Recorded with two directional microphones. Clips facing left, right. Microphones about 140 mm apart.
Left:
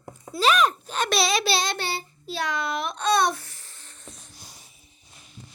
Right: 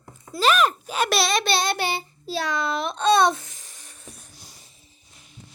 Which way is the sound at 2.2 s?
35° right (ahead or behind).